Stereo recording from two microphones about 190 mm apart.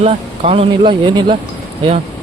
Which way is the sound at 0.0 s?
30° right (ahead or behind).